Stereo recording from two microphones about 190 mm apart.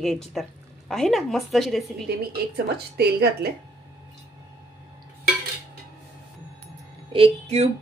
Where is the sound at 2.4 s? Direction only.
55° right (ahead or behind).